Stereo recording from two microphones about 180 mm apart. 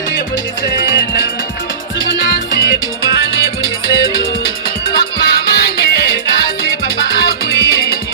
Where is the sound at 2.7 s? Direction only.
60° left (ahead or behind).